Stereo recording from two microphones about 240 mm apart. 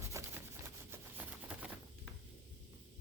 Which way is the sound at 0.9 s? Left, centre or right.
Centre.